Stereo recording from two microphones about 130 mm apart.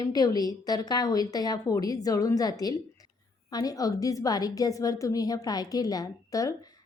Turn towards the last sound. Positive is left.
turn(degrees=25)  # may be behind; listen again after turning